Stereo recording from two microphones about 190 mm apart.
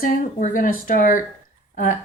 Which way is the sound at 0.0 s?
45° left (ahead or behind).